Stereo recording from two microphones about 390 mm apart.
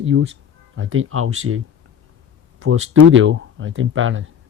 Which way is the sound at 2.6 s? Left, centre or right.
Right.